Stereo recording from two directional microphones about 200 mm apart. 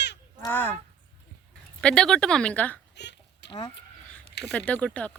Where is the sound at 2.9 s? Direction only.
60° left (ahead or behind).